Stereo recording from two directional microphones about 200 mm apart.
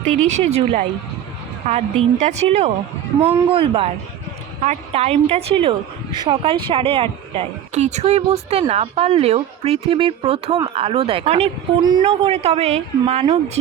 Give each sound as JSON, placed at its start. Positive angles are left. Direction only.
{"t": 0.0, "sound": "speech", "side_deg": 5}
{"t": 0.3, "sound": "a woman's voice", "side_deg": -35}